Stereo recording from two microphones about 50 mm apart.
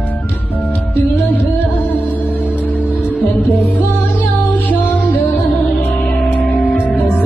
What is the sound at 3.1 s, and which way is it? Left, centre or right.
Music, left.